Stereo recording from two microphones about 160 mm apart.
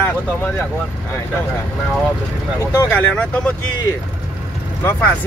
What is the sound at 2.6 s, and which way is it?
Speech, 15° left (ahead or behind).